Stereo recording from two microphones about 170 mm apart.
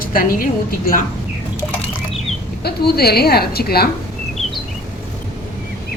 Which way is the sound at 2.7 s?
70° left (ahead or behind).